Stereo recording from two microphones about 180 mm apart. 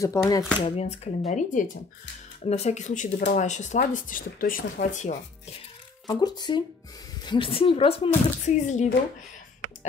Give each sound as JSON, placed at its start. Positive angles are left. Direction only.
{"t": 0.0, "sound": "speech", "side_deg": 20}
{"t": 0.7, "sound": "speech", "side_deg": 35}
{"t": 6.0, "sound": "a woman's voice", "side_deg": 20}
{"t": 8.5, "sound": "speech", "side_deg": 40}